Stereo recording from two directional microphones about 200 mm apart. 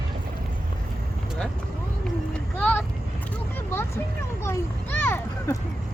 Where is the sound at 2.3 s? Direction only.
5° left (ahead or behind).